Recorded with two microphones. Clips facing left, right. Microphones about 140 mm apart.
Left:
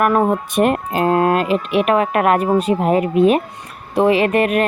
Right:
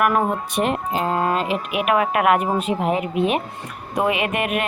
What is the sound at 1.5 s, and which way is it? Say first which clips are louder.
Speech: left 5 dB; 35° left (ahead or behind).